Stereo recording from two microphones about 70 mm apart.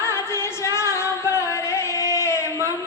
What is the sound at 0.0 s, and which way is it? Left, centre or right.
Singing, left.